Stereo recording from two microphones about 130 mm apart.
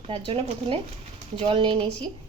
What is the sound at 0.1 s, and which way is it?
A woman's voice, 45° right (ahead or behind).